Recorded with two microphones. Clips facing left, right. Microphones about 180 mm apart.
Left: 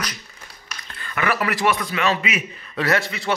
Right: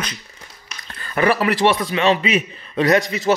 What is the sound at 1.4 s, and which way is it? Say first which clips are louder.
A man's voice: right 4 dB; 25° right (ahead or behind).